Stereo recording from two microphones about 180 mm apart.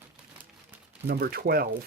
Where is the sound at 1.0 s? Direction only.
60° right (ahead or behind).